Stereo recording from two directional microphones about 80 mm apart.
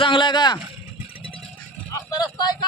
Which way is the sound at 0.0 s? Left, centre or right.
Left.